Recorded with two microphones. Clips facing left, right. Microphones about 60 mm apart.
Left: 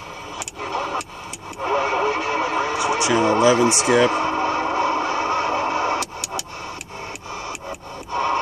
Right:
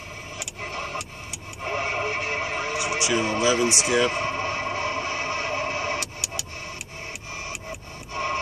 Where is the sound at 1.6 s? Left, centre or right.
Left.